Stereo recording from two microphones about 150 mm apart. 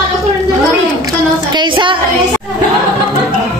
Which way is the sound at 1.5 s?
30° right (ahead or behind).